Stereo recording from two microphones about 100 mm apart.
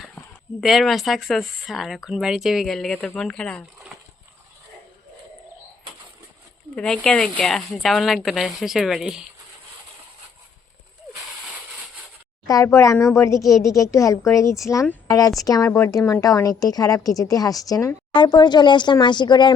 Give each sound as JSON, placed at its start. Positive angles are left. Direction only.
{"t": 0.6, "sound": "speech", "side_deg": 0}
{"t": 6.7, "sound": "speech", "side_deg": 10}
{"t": 12.5, "sound": "speech", "side_deg": 35}
{"t": 18.1, "sound": "speech", "side_deg": 50}